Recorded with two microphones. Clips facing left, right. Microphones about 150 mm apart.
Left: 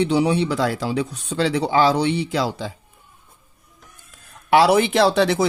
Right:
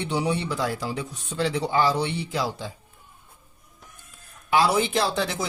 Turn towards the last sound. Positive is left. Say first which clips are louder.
# left 9 dB
turn(degrees=75)  # may be behind; listen again after turning